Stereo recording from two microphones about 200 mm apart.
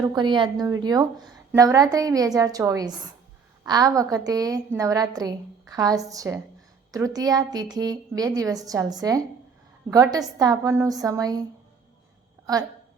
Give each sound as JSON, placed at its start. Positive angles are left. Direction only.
{"t": 0.0, "sound": "a woman's voice", "side_deg": -20}